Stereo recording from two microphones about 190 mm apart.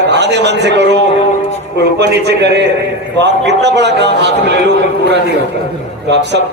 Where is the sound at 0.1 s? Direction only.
65° right (ahead or behind).